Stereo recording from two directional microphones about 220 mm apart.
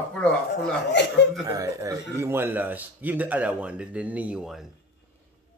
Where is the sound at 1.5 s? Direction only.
15° right (ahead or behind).